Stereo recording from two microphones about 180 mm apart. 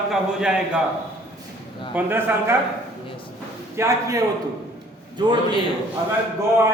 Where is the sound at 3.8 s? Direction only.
15° right (ahead or behind).